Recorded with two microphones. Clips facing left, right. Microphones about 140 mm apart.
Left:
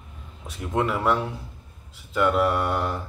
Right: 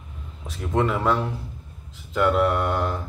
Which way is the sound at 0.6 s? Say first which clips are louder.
Right 2 dB; 5° left (ahead or behind).